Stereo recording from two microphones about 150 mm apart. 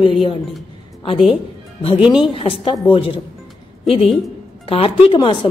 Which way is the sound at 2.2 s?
35° left (ahead or behind).